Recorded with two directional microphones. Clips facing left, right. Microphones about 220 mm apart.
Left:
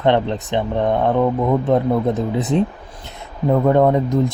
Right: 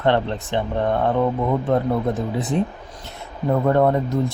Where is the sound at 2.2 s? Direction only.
20° left (ahead or behind).